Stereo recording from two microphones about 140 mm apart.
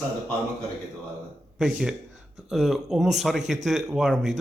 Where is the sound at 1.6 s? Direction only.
5° right (ahead or behind).